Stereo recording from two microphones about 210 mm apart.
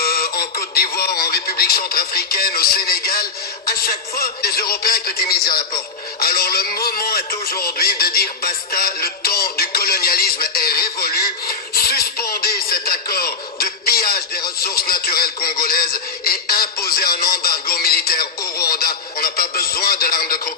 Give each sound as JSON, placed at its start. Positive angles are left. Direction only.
{"t": 0.0, "sound": "a man's voice", "side_deg": 45}
{"t": 6.1, "sound": "music", "side_deg": 45}
{"t": 14.6, "sound": "a sound", "side_deg": 45}